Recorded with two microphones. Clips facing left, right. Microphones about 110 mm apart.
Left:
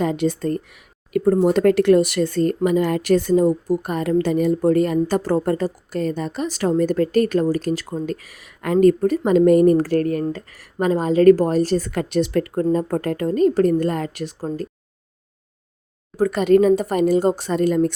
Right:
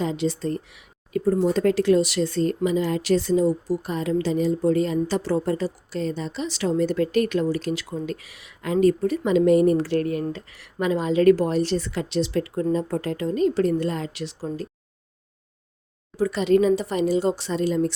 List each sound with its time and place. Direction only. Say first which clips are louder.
0.0 s a woman's voice: left 4 dB; 55° left (ahead or behind)
1.1 s a woman's voice: left 5 dB; 60° left (ahead or behind)
16.1 s a woman's voice: left 4 dB; 50° left (ahead or behind)